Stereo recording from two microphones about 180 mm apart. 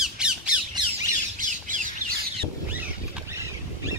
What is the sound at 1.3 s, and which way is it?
Squawk, 45° right (ahead or behind).